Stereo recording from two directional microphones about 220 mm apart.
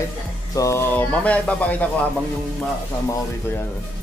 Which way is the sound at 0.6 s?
15° left (ahead or behind).